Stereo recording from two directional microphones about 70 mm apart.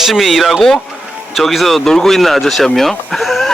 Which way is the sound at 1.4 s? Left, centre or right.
Centre.